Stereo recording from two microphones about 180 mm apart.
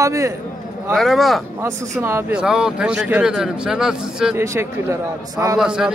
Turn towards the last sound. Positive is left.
turn(degrees=-5)  # may be behind; listen again after turning